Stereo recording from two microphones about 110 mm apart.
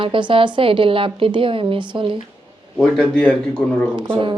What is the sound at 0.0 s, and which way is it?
A woman's voice, 50° right (ahead or behind).